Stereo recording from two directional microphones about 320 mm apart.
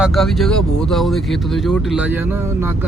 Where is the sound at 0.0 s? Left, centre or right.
Centre.